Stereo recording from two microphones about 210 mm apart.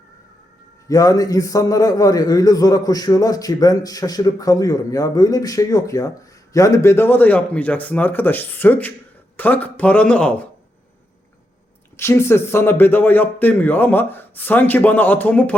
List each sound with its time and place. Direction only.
0.9 s a man's voice: 15° left (ahead or behind)
11.9 s a man's voice: 10° left (ahead or behind)